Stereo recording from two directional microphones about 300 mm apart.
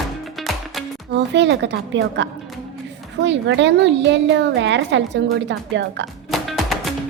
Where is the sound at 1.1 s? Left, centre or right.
Right.